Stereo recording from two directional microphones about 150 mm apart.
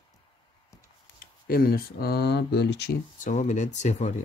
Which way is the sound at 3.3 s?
55° left (ahead or behind).